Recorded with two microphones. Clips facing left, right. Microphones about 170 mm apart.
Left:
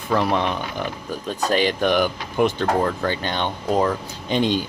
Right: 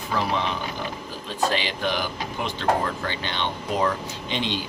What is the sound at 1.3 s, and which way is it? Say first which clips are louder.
Speech: left 5 dB; 45° left (ahead or behind).